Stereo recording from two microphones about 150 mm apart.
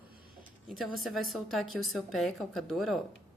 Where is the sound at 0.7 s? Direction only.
Centre (ahead or behind).